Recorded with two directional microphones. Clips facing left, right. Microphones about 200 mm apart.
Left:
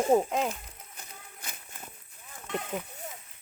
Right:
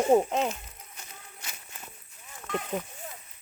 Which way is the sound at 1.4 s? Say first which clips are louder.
Left 1 dB; 50° left (ahead or behind).